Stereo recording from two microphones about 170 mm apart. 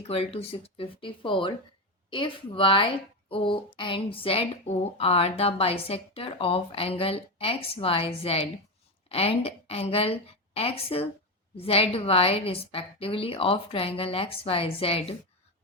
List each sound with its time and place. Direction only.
0.1 s a woman's voice: 35° left (ahead or behind)